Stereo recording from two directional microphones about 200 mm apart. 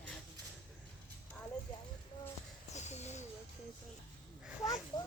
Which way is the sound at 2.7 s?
35° left (ahead or behind).